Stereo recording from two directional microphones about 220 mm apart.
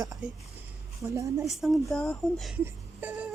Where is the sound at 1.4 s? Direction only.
Centre (ahead or behind).